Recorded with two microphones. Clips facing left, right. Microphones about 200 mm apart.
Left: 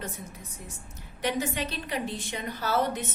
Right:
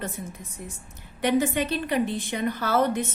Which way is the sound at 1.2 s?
55° right (ahead or behind).